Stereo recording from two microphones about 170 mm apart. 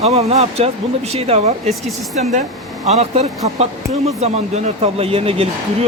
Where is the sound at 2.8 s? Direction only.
40° right (ahead or behind).